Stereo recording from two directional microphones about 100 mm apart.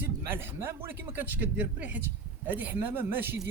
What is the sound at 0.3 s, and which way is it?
Speech, 20° right (ahead or behind).